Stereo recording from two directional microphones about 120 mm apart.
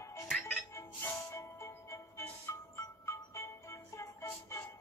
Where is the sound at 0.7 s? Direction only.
25° left (ahead or behind).